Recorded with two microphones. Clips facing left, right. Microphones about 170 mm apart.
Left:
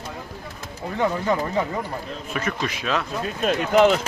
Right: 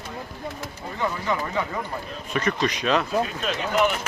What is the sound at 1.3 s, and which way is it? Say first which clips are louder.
Speech: left 1 dB; 45° left (ahead or behind).